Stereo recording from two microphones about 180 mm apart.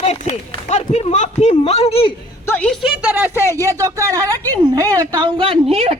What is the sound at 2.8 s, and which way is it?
A woman's voice, 10° right (ahead or behind).